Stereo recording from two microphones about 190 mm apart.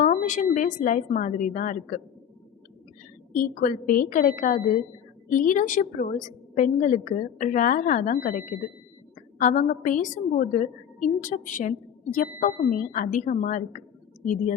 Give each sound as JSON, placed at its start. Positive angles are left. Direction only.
{"t": 0.0, "sound": "a woman's voice", "side_deg": 40}
{"t": 3.3, "sound": "a woman's voice", "side_deg": 45}